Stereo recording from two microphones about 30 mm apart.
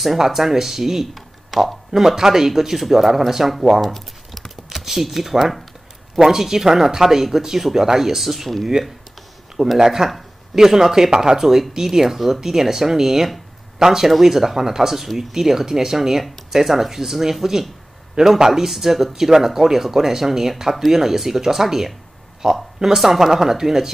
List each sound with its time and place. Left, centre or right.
0.0 s speech: centre
1.1 s a sound: centre
2.0 s speech: centre
3.9 s a sound: centre
4.6 s speech: centre
8.2 s speech: centre
8.8 s speech: right